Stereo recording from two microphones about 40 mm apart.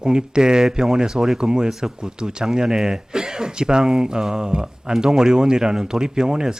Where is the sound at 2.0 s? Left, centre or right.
Centre.